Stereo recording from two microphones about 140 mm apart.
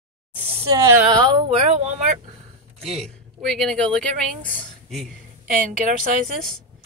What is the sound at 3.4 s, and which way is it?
Speech, 5° left (ahead or behind).